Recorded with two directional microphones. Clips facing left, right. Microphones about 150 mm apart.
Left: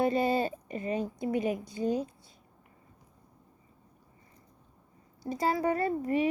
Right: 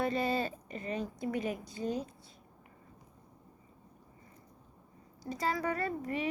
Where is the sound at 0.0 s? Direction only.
25° left (ahead or behind).